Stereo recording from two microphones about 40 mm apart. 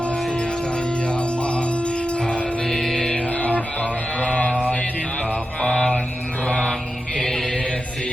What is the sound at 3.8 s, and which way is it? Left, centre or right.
Music, left.